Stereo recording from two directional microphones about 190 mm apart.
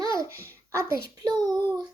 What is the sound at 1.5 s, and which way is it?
Child singing, 10° left (ahead or behind).